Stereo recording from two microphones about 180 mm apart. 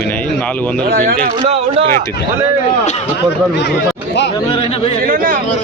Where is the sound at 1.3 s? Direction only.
30° right (ahead or behind).